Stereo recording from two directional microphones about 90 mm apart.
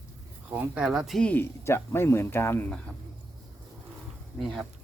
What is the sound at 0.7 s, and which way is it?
Speech, 5° right (ahead or behind).